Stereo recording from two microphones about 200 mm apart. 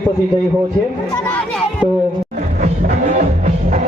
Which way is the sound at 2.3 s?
40° right (ahead or behind).